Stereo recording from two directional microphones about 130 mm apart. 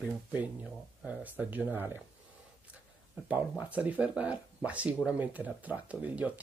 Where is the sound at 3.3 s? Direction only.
10° right (ahead or behind).